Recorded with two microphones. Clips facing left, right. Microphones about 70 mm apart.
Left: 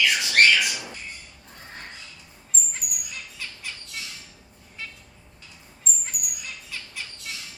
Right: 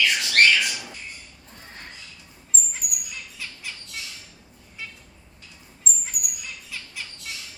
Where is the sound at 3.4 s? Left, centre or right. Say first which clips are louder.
Even; centre.